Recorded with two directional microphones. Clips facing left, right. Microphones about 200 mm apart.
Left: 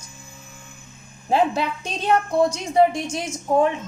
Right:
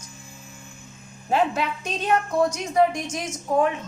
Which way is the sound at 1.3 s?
30° left (ahead or behind).